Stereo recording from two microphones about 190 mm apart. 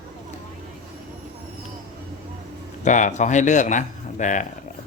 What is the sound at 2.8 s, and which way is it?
A man's voice, 40° left (ahead or behind).